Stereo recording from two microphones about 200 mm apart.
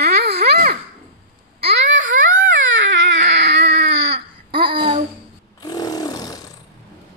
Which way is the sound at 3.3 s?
60° right (ahead or behind).